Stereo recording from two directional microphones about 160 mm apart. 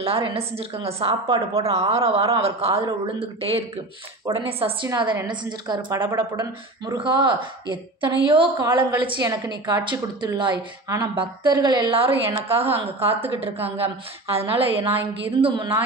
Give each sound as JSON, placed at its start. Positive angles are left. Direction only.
{"t": 0.0, "sound": "a man's voice", "side_deg": -40}
{"t": 1.2, "sound": "a woman's voice", "side_deg": -25}
{"t": 1.6, "sound": "a man's voice", "side_deg": -40}